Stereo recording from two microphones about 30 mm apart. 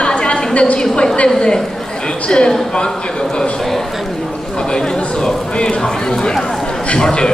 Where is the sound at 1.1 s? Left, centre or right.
Left.